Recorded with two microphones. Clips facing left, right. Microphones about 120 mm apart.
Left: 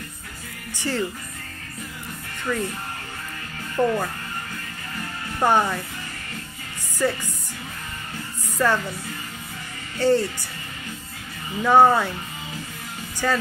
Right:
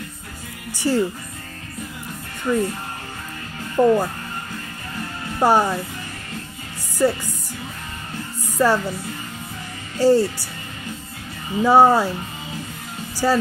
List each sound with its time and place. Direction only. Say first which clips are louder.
0.7 s speech: right 6 dB; 10° right (ahead or behind)
2.5 s speech: right 6 dB; 20° right (ahead or behind)
3.7 s speech: right 6 dB; 20° right (ahead or behind)
5.4 s speech: right 3 dB; 10° right (ahead or behind)
8.5 s speech: right 4 dB; 10° right (ahead or behind)
9.9 s speech: right 4 dB; 10° right (ahead or behind)
11.6 s speech: right 2 dB; 10° right (ahead or behind)
13.2 s speech: right 5 dB; 20° right (ahead or behind)